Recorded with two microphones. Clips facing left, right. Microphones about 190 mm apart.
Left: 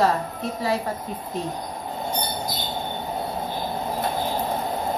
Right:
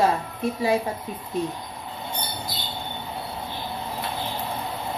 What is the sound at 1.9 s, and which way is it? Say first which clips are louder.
Train: left 5 dB; 45° left (ahead or behind).